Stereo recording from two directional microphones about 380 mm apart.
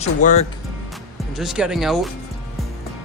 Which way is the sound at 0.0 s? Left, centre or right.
Centre.